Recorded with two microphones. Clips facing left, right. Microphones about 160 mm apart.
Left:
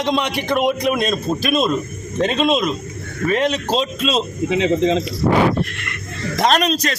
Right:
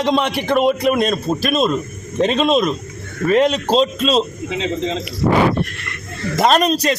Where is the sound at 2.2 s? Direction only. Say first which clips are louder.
Right 2 dB; centre (ahead or behind).